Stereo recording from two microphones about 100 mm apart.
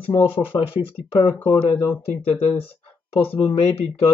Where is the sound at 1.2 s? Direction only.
55° left (ahead or behind).